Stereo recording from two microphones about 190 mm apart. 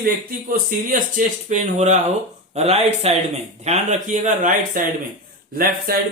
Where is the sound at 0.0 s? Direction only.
45° right (ahead or behind).